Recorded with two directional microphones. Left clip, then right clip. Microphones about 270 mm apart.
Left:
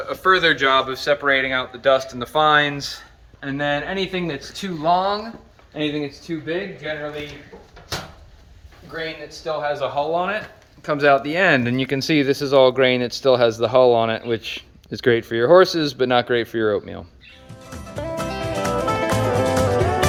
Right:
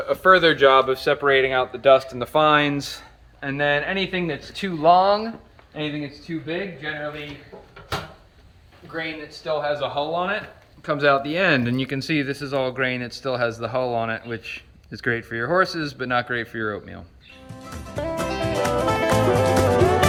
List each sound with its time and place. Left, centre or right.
0.1 s speech: right
3.4 s speech: centre
9.4 s speech: centre
17.7 s music: centre